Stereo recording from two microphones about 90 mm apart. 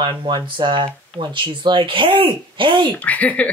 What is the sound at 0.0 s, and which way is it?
Speech, 65° right (ahead or behind).